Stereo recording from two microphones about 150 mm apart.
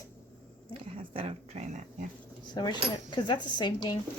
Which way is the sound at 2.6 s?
30° left (ahead or behind).